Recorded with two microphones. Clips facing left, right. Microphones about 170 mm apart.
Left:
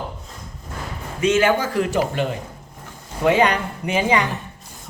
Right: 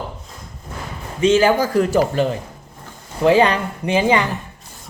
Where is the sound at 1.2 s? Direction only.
30° right (ahead or behind).